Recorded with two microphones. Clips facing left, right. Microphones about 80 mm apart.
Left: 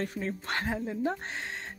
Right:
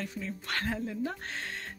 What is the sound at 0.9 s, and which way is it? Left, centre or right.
Speech, left.